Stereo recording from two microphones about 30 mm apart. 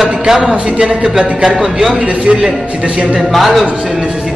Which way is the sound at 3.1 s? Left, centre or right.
Centre.